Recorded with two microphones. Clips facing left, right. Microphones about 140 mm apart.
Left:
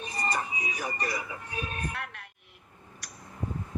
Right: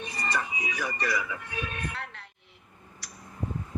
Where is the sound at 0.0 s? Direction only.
40° left (ahead or behind).